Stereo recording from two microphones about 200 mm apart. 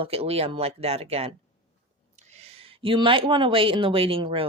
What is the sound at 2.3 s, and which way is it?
A woman's voice, 30° right (ahead or behind).